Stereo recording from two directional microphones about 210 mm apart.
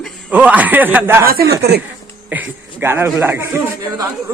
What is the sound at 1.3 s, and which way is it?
Speech, 45° right (ahead or behind).